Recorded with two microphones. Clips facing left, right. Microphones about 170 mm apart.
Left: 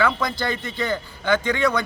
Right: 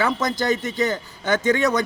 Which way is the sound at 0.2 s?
45° right (ahead or behind).